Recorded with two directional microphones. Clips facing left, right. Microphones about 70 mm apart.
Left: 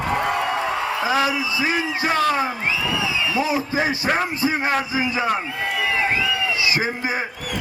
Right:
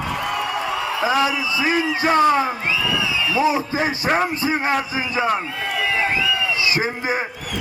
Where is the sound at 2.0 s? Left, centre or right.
Right.